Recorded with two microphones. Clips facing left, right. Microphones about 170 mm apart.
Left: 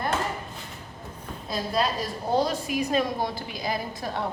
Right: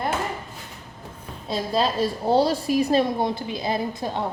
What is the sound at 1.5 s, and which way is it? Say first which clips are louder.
A woman's voice: right 3 dB; 30° right (ahead or behind).